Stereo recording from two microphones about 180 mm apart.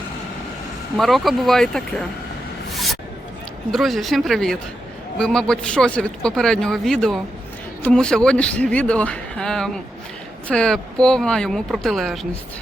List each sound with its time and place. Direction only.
0.9 s a man's voice: centre (ahead or behind)
3.7 s a man's voice: centre (ahead or behind)